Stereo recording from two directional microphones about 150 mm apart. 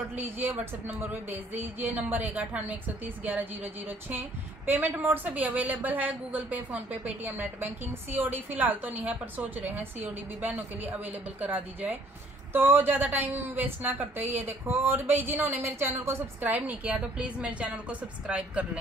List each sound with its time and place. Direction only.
0.4 s a woman's voice: 10° right (ahead or behind)
4.6 s a woman's voice: 10° right (ahead or behind)